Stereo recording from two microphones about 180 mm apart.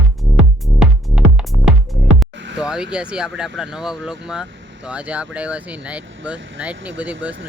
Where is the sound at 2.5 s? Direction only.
5° right (ahead or behind).